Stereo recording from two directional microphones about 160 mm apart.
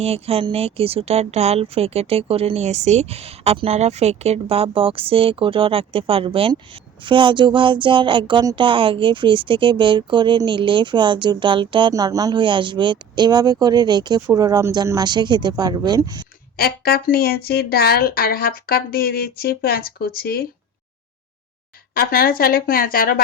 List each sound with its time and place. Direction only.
0.0 s speech: 40° right (ahead or behind)
16.6 s speech: 70° left (ahead or behind)
21.9 s speech: 65° left (ahead or behind)